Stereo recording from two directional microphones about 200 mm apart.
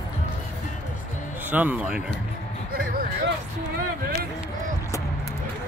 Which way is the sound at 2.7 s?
45° right (ahead or behind).